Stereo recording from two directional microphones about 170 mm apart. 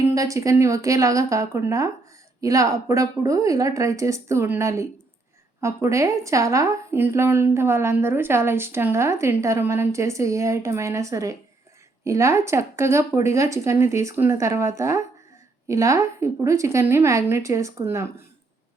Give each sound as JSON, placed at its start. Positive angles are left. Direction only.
{"t": 0.0, "sound": "a woman's voice", "side_deg": -20}